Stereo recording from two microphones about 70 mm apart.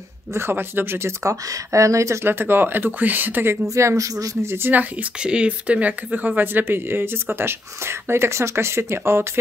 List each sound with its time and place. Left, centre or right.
0.3 s speech: right
2.2 s speech: right
3.7 s speech: right
4.4 s speech: right
5.2 s speech: centre; by 9.4 s right